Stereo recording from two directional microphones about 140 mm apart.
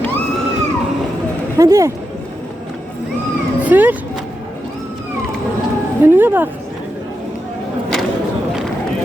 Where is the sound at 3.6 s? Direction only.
10° right (ahead or behind).